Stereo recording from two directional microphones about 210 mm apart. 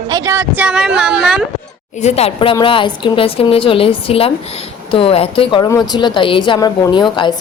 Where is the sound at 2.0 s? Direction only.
30° left (ahead or behind).